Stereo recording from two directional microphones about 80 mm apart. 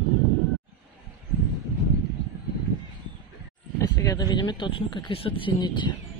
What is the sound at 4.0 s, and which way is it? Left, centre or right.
A man's voice, left.